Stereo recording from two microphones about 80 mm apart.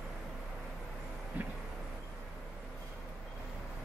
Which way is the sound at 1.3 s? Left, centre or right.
Centre.